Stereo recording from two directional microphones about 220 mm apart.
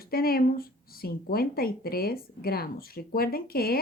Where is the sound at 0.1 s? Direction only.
45° left (ahead or behind).